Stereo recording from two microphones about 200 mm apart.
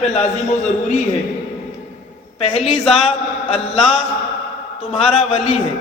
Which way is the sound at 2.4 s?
30° left (ahead or behind).